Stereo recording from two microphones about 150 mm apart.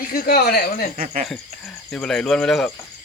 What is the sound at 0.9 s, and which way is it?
Speech, 50° right (ahead or behind).